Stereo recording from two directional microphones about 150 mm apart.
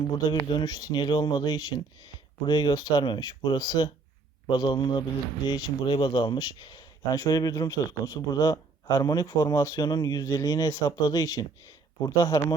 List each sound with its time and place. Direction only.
0.3 s a man's voice: 30° left (ahead or behind)